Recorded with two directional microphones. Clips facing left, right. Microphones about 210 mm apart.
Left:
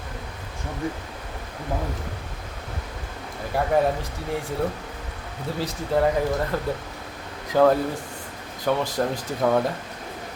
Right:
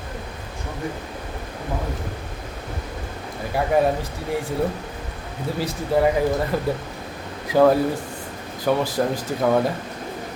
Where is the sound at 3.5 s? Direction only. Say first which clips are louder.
Right 1 dB; 5° right (ahead or behind).